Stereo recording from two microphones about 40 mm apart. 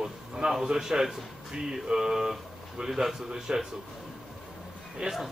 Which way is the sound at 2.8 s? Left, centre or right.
Right.